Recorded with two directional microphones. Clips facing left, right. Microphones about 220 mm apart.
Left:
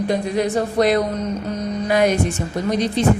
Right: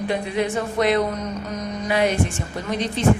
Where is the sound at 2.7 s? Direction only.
40° left (ahead or behind).